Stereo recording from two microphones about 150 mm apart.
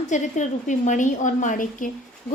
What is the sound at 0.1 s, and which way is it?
A woman's voice, 55° left (ahead or behind).